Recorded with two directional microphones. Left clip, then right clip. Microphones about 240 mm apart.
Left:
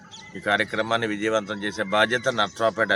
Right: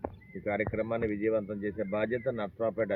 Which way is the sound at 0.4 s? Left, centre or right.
Centre.